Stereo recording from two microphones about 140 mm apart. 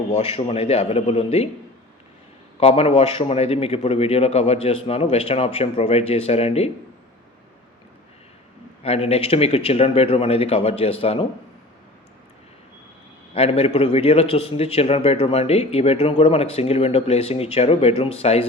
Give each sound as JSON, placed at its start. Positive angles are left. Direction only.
{"t": 0.2, "sound": "a man's voice", "side_deg": 45}
{"t": 2.6, "sound": "a man's voice", "side_deg": 45}
{"t": 8.8, "sound": "a man's voice", "side_deg": 45}
{"t": 13.3, "sound": "a man's voice", "side_deg": 45}